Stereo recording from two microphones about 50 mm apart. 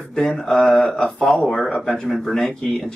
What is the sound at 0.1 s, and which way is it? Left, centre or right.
Speech, centre.